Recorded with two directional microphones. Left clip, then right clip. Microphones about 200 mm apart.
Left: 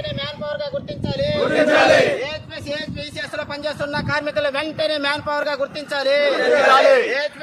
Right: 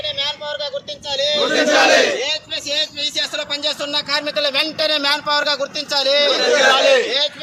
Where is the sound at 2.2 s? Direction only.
20° right (ahead or behind); by 6.3 s 15° left (ahead or behind).